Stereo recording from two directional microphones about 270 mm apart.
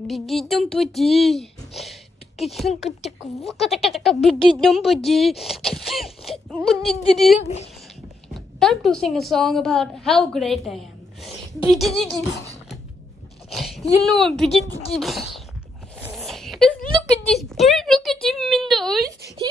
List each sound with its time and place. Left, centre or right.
0.0 s a woman's voice: centre
6.2 s a sound: centre
6.7 s a woman's voice: centre
7.3 s speech: left
8.3 s a woman's voice: centre
13.5 s sneeze: centre
14.0 s a woman's voice: centre
16.0 s a sound: centre
17.3 s a woman's voice: centre
19.0 s a woman's voice: centre